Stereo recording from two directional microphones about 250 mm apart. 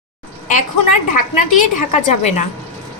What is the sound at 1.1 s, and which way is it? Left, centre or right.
A woman's voice, left.